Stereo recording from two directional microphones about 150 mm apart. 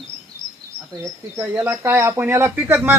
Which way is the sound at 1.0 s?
20° right (ahead or behind).